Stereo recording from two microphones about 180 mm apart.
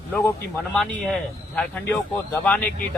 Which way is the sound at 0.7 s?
5° left (ahead or behind).